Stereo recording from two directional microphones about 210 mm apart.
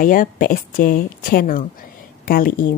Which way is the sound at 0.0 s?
40° left (ahead or behind).